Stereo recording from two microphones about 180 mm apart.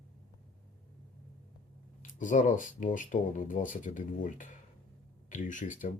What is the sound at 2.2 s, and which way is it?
Speech, 45° left (ahead or behind).